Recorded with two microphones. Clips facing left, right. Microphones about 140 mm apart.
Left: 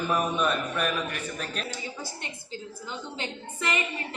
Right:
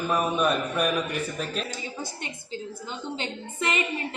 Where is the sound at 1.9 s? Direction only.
20° right (ahead or behind).